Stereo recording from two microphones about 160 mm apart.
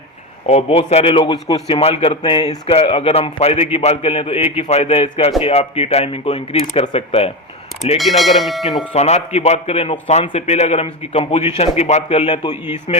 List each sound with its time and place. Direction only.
0.4 s speech: 40° left (ahead or behind)
7.9 s speech: centre (ahead or behind)
8.9 s speech: 40° left (ahead or behind)